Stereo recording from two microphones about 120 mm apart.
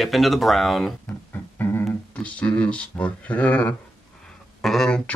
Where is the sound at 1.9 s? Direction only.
10° left (ahead or behind).